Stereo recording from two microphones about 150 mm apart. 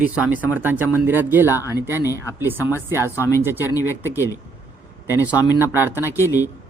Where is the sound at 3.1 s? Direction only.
20° left (ahead or behind).